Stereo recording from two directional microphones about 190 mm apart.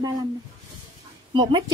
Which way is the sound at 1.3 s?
25° right (ahead or behind).